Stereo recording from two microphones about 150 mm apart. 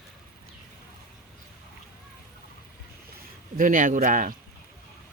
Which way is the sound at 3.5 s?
60° right (ahead or behind).